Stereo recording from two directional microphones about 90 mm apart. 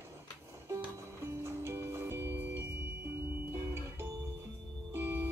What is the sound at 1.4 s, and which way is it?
Music, 30° right (ahead or behind).